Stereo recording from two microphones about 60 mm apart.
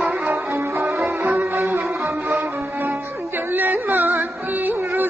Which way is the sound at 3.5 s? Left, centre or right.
Right.